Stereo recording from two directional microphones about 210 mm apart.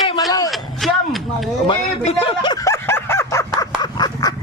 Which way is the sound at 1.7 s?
25° left (ahead or behind).